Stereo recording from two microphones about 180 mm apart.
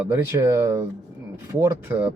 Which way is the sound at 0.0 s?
15° right (ahead or behind).